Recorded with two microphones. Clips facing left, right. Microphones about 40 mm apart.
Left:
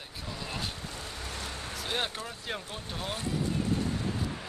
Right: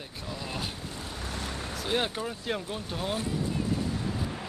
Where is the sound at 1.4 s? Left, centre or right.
Right.